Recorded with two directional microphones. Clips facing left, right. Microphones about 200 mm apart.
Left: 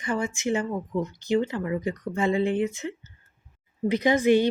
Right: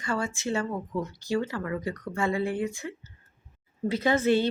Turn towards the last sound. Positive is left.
turn(degrees=15)  # may be behind; listen again after turning